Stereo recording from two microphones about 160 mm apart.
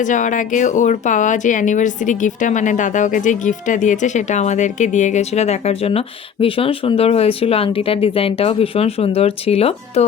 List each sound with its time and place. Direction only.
0.0 s speech: 50° left (ahead or behind)